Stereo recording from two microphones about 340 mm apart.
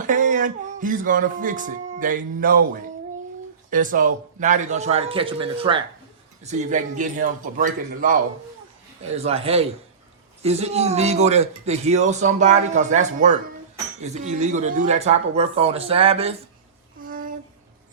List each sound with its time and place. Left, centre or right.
0.0 s music: right
3.7 s a man's voice: right
17.1 s a sound: right